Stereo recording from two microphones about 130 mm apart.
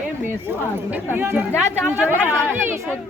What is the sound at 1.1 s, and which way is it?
Speech, 15° right (ahead or behind).